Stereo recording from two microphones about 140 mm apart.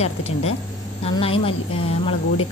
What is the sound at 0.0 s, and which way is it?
A woman's voice, 50° left (ahead or behind).